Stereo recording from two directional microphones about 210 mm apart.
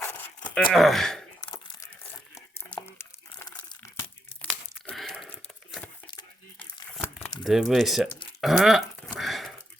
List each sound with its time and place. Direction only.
0.0 s dog: 10° left (ahead or behind)
0.7 s speech: centre (ahead or behind)
1.5 s crumpling: 15° left (ahead or behind)
4.9 s a sound: 5° left (ahead or behind)
6.1 s crumpling: 20° left (ahead or behind)
6.9 s crumpling: 5° left (ahead or behind)
8.4 s dog: centre (ahead or behind)